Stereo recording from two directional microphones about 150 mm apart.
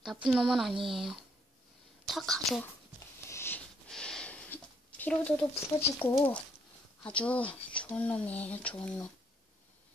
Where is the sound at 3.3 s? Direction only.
15° left (ahead or behind).